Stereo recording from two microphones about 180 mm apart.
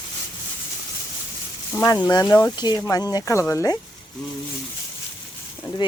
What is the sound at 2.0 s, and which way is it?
Speech, 15° left (ahead or behind).